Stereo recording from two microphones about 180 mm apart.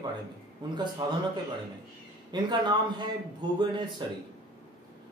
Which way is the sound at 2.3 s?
25° right (ahead or behind).